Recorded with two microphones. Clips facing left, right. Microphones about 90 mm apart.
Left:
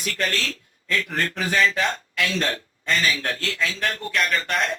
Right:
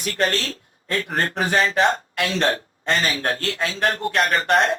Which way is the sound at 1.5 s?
40° right (ahead or behind).